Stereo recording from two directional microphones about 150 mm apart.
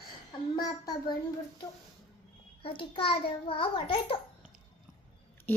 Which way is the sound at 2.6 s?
35° left (ahead or behind).